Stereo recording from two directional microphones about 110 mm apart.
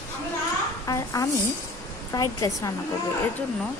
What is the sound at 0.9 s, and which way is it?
A woman's voice, 30° left (ahead or behind).